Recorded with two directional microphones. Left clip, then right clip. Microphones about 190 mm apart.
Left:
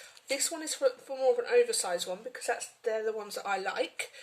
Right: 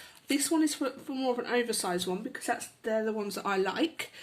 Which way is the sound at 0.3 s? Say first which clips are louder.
Right 5 dB; 25° right (ahead or behind).